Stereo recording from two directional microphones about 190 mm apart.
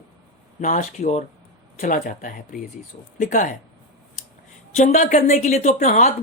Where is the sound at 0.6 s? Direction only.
40° left (ahead or behind).